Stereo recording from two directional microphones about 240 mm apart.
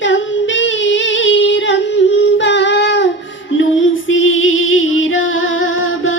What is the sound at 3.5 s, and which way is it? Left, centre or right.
Music, left.